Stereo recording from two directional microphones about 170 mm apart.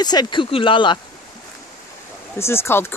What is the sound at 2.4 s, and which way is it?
Speech, 15° left (ahead or behind).